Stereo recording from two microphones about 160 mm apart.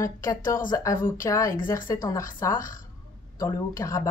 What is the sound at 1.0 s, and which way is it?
Speech, 60° left (ahead or behind).